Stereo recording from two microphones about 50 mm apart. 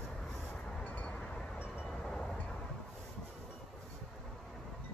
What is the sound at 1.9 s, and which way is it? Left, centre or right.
Wind chime, centre.